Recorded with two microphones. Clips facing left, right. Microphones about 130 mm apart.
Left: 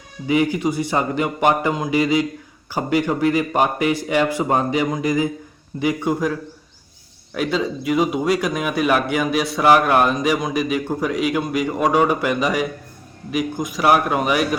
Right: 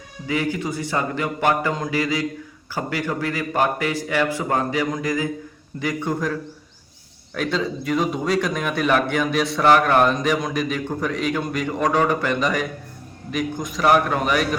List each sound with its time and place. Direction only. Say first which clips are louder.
0.3 s speech: left 5 dB; 15° left (ahead or behind)